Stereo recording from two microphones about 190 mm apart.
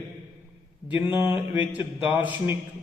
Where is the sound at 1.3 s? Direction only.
25° left (ahead or behind).